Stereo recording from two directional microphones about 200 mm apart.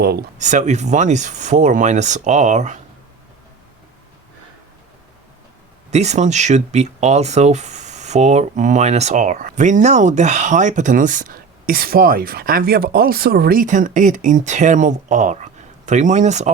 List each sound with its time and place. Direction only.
0.0 s speech: 50° right (ahead or behind)
0.3 s speech: 35° right (ahead or behind)
5.9 s speech: 35° right (ahead or behind)